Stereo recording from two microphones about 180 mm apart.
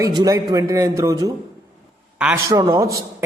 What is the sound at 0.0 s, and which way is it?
A man's voice, 20° right (ahead or behind).